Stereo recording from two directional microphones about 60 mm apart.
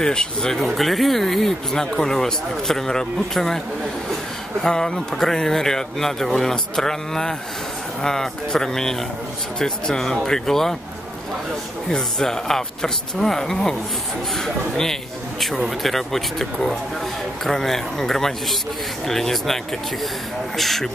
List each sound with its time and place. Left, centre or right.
0.0 s speech: centre
4.6 s speech: centre
11.9 s speech: centre